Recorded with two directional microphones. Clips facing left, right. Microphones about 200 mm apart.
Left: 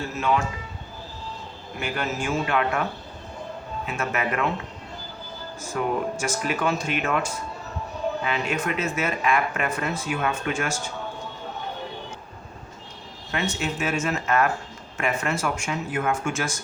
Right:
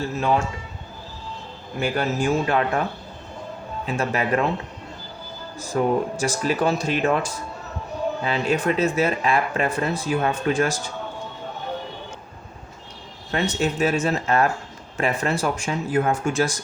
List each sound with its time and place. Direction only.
0.2 s speech: 35° right (ahead or behind)
1.8 s speech: 35° right (ahead or behind)
3.8 s speech: 35° right (ahead or behind)
5.5 s speech: 35° right (ahead or behind)
13.3 s speech: 35° right (ahead or behind)